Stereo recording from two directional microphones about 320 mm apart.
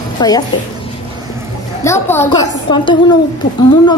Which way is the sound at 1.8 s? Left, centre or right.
Centre.